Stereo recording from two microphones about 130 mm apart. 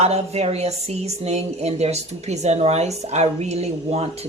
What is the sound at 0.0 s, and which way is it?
Speech, 55° right (ahead or behind).